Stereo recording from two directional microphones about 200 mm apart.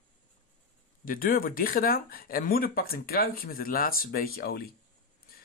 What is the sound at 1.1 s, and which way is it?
Speech, 45° left (ahead or behind).